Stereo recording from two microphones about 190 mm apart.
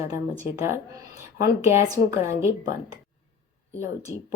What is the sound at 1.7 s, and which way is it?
Speech, 15° right (ahead or behind).